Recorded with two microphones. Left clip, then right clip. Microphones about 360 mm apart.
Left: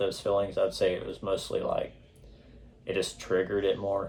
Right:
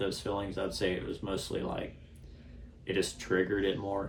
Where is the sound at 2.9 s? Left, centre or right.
Centre.